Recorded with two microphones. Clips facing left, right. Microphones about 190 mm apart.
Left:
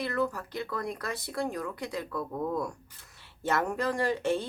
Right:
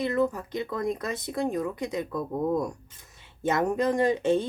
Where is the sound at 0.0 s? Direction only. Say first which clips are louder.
Right 5 dB; 20° right (ahead or behind).